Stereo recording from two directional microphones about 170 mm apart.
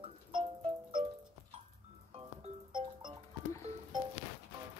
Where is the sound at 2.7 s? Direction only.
30° right (ahead or behind).